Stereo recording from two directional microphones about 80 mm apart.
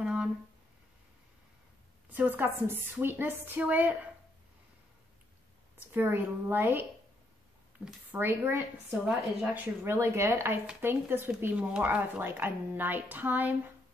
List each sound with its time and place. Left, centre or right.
0.0 s a sound: centre
2.1 s speech: right
5.9 s speech: right
8.1 s a woman's voice: right
9.8 s speech: right